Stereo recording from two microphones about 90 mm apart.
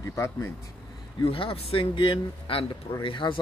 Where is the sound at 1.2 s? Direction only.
85° left; by 3.4 s 70° left (ahead or behind).